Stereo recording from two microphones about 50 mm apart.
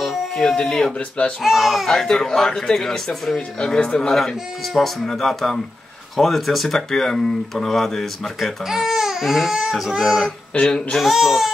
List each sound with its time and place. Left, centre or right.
0.0 s a sound: centre
0.6 s speech: centre
0.9 s speech: left
1.4 s speech: centre
1.9 s speech: centre
5.0 s speech: centre
8.6 s speech: centre
10.6 s speech: centre
11.0 s speech: centre